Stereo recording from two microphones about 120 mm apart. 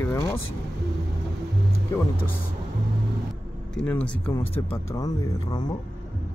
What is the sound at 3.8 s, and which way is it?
Speech, 10° left (ahead or behind).